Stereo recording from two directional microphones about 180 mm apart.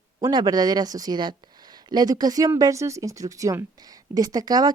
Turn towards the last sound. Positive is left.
turn(degrees=-20)  # may be behind; listen again after turning